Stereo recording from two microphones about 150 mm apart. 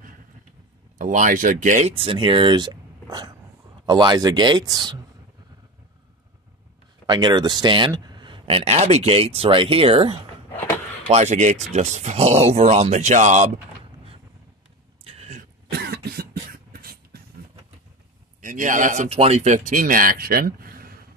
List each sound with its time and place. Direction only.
0.9 s speech: 60° right (ahead or behind); by 4.9 s 30° right (ahead or behind)
7.1 s speech: 30° right (ahead or behind)
11.1 s speech: 50° right (ahead or behind)
15.0 s a sound: 45° right (ahead or behind)
15.7 s cough: 90° right
16.7 s beatboxing: 90° right
18.4 s speech: 60° right (ahead or behind); by 20.9 s 75° right (ahead or behind)